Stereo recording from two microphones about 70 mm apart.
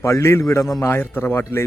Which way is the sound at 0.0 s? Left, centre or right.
Left.